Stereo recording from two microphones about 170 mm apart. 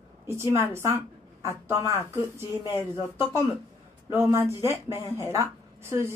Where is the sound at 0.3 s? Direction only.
15° right (ahead or behind).